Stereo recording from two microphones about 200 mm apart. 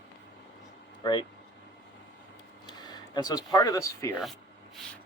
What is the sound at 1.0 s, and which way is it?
Speech, 20° left (ahead or behind).